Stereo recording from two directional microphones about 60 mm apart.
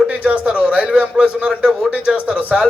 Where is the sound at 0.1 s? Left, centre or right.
Centre.